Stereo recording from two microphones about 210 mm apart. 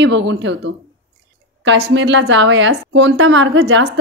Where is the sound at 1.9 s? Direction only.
60° right (ahead or behind).